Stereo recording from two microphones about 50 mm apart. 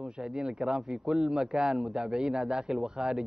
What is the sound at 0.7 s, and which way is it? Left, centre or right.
A man's voice, centre.